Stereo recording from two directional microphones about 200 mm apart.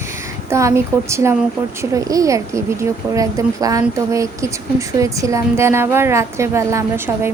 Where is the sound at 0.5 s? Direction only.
15° right (ahead or behind).